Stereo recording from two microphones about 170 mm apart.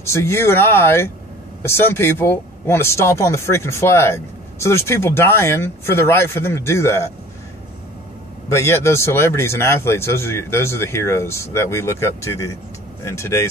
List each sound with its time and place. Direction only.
0.0 s speech: 15° left (ahead or behind)
8.5 s speech: 15° left (ahead or behind)